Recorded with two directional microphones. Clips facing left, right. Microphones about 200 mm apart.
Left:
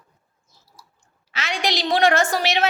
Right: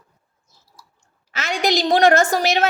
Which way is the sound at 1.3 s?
45° right (ahead or behind).